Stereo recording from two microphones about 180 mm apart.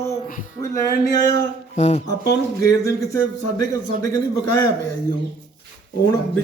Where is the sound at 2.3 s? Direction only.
20° left (ahead or behind).